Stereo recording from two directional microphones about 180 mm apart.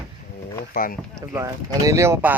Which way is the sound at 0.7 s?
50° left (ahead or behind).